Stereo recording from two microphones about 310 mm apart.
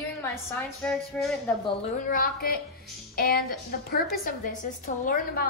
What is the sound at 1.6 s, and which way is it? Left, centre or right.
A woman's voice, left.